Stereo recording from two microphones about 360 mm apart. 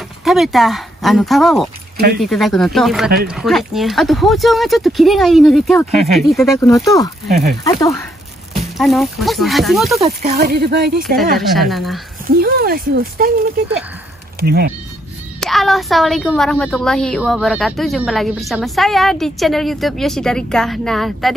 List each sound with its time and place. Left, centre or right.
0.2 s a woman's voice: centre
10.0 s speech: right
11.7 s a woman's voice: centre
12.3 s speech: right
14.4 s speech: right
15.4 s a woman's voice: centre